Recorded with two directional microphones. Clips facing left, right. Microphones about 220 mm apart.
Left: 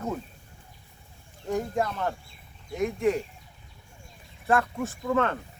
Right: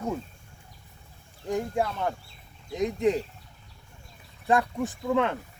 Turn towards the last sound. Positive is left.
turn(degrees=-15)  # may be behind; listen again after turning